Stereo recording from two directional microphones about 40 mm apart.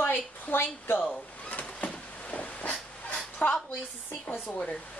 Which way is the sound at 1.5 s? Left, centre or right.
Left.